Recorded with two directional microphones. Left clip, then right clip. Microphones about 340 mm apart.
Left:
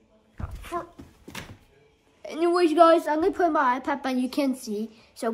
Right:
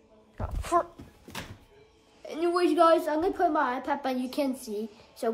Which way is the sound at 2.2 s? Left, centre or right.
Centre.